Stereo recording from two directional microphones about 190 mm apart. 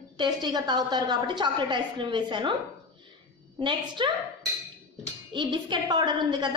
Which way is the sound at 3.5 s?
25° right (ahead or behind).